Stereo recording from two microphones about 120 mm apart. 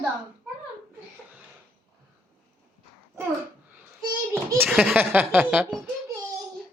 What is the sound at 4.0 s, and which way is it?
Speech, 30° right (ahead or behind).